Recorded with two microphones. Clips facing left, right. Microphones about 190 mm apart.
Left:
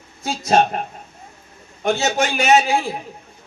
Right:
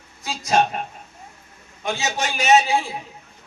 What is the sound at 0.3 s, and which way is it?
A man's voice, 50° left (ahead or behind).